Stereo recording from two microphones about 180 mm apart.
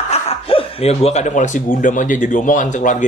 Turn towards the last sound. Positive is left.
turn(degrees=45)  # may be behind; listen again after turning